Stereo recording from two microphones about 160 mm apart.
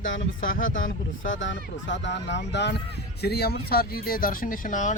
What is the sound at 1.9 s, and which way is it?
Speech, 90° left.